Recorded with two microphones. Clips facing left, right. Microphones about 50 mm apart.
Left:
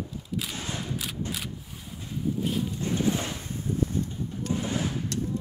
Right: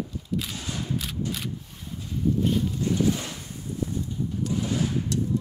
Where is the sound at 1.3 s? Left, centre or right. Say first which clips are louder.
Right 2 dB; centre.